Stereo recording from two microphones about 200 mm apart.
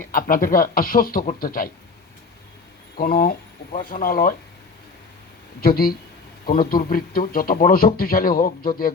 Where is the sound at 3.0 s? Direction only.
45° left (ahead or behind).